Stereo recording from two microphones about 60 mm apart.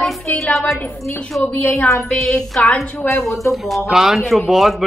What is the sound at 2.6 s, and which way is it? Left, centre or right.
Speech, left.